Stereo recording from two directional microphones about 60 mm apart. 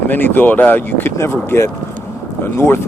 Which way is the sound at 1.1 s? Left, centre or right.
Left.